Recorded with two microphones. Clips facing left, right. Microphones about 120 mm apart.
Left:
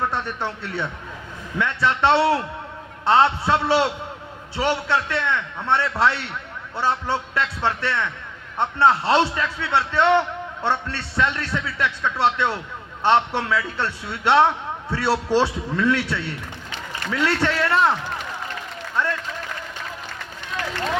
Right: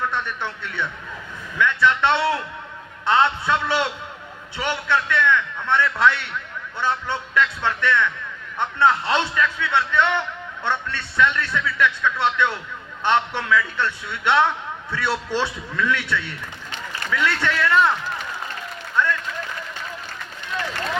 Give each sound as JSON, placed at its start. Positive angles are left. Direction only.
{"t": 0.0, "sound": "a man's voice", "side_deg": 35}